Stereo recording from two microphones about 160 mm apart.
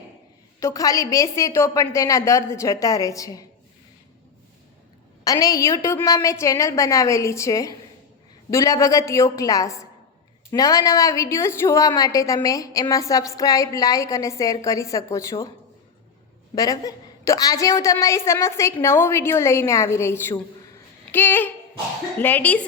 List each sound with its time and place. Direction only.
0.6 s a woman's voice: 20° left (ahead or behind)
5.2 s a woman's voice: 20° left (ahead or behind)
16.6 s a woman's voice: 20° left (ahead or behind)